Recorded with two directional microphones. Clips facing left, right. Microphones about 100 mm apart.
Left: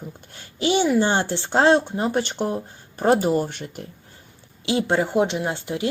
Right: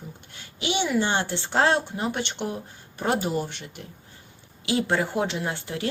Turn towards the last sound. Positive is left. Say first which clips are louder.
# left 4 dB
turn(degrees=20)  # may be behind; listen again after turning